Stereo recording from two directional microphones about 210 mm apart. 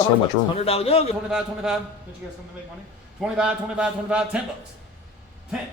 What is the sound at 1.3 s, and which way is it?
Speech, 5° right (ahead or behind).